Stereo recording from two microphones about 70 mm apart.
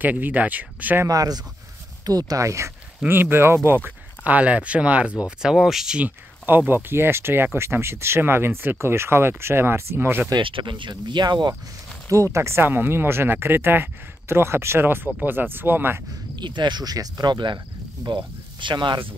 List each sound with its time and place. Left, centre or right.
0.0 s speech: right
1.0 s speech: right
3.1 s speech: right
4.2 s speech: right
5.9 s speech: right
10.3 s speech: right
12.1 s speech: right
16.3 s speech: right